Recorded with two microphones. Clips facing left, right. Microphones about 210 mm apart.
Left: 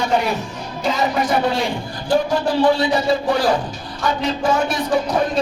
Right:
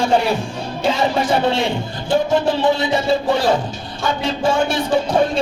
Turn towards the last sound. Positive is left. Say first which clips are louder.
# right 2 dB
turn(degrees=-30)  # may be behind; listen again after turning